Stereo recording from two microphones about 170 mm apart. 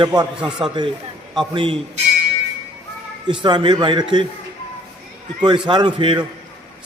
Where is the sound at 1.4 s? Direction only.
30° right (ahead or behind).